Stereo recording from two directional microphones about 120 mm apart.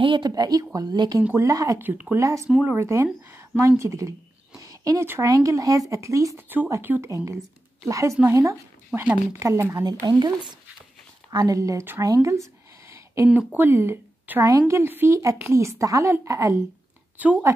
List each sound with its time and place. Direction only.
0.0 s speech: 45° right (ahead or behind)
0.3 s a woman's voice: 30° right (ahead or behind)
1.8 s speech: 15° right (ahead or behind)
2.1 s a woman's voice: 25° right (ahead or behind)
4.6 s a sound: 30° right (ahead or behind)
5.3 s a woman's voice: 30° right (ahead or behind)
12.0 s a sound: 25° right (ahead or behind)
13.3 s a woman's voice: 10° right (ahead or behind)
17.2 s speech: 15° right (ahead or behind)